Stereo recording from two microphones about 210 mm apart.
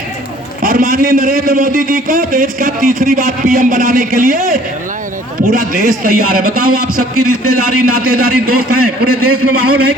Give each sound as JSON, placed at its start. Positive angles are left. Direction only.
{"t": 0.6, "sound": "a man's voice", "side_deg": -40}
{"t": 7.2, "sound": "a man's voice", "side_deg": -90}